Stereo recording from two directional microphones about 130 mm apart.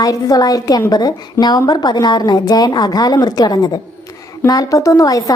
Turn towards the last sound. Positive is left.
turn(degrees=25)  # may be behind; listen again after turning